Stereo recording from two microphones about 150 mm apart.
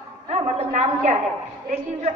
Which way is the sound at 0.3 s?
45° right (ahead or behind).